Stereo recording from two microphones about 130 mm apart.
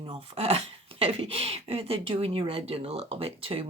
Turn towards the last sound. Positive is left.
turn(degrees=-45)  # may be behind; listen again after turning